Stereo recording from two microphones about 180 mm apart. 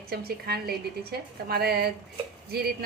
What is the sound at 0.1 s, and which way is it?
A woman's voice, 60° right (ahead or behind).